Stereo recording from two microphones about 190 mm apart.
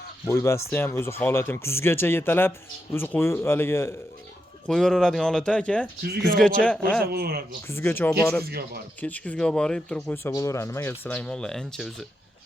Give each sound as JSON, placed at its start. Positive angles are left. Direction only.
{"t": 0.3, "sound": "speech", "side_deg": 15}
{"t": 7.0, "sound": "speech", "side_deg": -55}
{"t": 7.7, "sound": "speech", "side_deg": 10}
{"t": 8.4, "sound": "speech", "side_deg": -55}
{"t": 9.0, "sound": "speech", "side_deg": 10}